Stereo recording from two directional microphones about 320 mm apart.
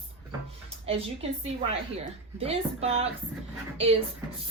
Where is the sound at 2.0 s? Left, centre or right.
Centre.